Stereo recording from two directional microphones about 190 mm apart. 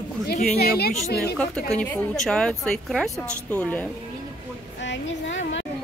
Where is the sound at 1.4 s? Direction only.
5° left (ahead or behind).